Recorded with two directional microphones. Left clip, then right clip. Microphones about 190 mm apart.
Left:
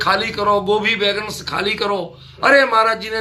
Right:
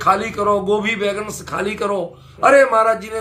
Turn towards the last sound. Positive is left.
turn(degrees=10)  # may be behind; listen again after turning